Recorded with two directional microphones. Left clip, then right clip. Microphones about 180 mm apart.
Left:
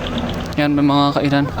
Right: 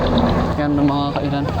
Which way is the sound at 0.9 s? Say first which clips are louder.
Left 5 dB; 60° left (ahead or behind).